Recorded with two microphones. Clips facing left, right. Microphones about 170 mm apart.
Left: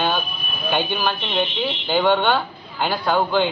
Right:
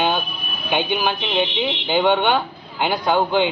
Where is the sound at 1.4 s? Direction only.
80° right.